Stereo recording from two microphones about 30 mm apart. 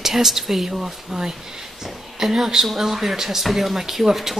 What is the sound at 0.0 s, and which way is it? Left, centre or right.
Speech, centre.